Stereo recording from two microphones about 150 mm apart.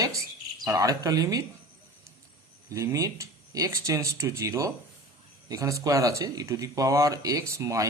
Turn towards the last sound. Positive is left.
turn(degrees=-20)  # may be behind; listen again after turning